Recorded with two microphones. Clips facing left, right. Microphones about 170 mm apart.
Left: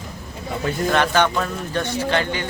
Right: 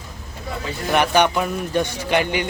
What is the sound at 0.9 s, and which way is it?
Speech, 15° right (ahead or behind).